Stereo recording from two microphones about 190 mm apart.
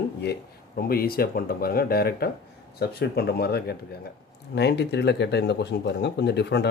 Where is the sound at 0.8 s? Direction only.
50° left (ahead or behind).